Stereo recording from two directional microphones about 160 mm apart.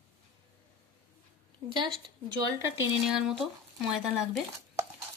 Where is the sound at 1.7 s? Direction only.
30° right (ahead or behind).